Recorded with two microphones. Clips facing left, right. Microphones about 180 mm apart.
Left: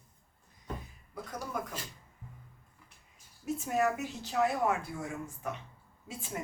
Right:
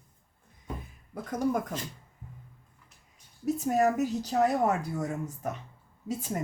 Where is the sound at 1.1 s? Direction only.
50° right (ahead or behind).